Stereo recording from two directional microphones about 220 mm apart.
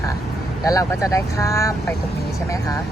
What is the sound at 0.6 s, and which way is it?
Speech, 15° left (ahead or behind).